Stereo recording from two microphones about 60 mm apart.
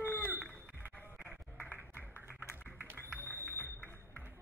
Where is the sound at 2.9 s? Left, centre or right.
Left.